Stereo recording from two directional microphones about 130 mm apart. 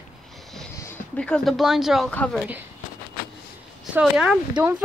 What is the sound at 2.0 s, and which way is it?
Speech, 10° left (ahead or behind).